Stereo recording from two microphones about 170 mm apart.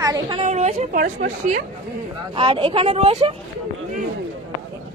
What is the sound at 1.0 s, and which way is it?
Speech, 50° right (ahead or behind).